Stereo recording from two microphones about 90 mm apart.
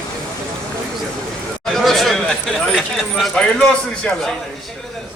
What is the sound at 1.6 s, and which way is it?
Speech, centre (ahead or behind).